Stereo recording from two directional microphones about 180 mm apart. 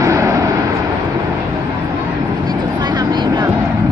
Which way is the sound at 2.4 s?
25° right (ahead or behind).